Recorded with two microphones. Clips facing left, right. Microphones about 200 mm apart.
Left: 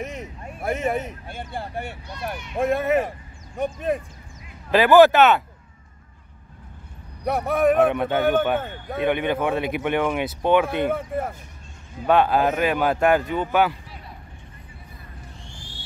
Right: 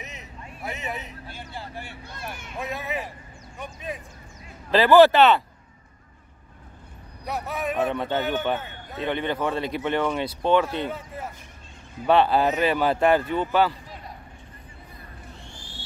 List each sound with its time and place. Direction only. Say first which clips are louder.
0.0 s speech: left 9 dB; 50° left (ahead or behind)
4.6 s speech: left 1 dB; 15° left (ahead or behind)
7.2 s speech: left 10 dB; 55° left (ahead or behind)
7.9 s speech: left 3 dB; 10° left (ahead or behind)
8.2 s speech: left 6 dB; 50° left (ahead or behind)
9.0 s speech: left 4 dB; 10° left (ahead or behind)
10.7 s speech: left 7 dB; 55° left (ahead or behind)
12.1 s speech: left 1 dB; 10° left (ahead or behind)
12.4 s speech: left 1 dB; 50° left (ahead or behind)
12.7 s speech: left 1 dB; 10° left (ahead or behind)